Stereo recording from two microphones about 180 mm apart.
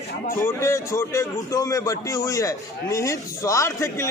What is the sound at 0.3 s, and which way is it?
A man's voice, 15° left (ahead or behind).